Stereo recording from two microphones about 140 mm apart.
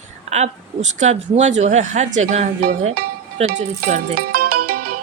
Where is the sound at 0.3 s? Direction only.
50° right (ahead or behind).